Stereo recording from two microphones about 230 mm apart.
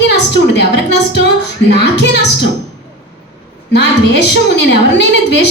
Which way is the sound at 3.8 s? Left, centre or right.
Left.